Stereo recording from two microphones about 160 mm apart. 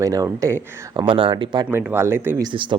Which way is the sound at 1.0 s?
35° right (ahead or behind).